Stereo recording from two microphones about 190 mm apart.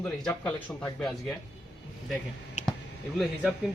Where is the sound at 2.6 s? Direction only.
40° left (ahead or behind).